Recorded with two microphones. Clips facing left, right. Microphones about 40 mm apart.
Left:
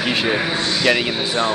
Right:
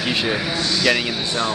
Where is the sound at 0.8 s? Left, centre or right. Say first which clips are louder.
Left 2 dB; centre.